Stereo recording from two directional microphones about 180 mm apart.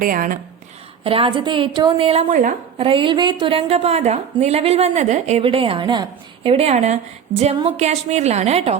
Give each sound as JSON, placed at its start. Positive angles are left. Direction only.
{"t": 0.0, "sound": "speech", "side_deg": -50}
{"t": 1.0, "sound": "a woman's voice", "side_deg": -30}
{"t": 2.3, "sound": "a woman's voice", "side_deg": -45}
{"t": 2.8, "sound": "a woman's voice", "side_deg": -30}
{"t": 5.4, "sound": "a woman's voice", "side_deg": -30}